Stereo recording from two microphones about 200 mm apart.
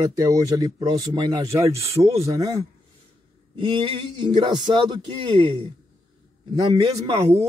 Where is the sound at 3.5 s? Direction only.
25° right (ahead or behind).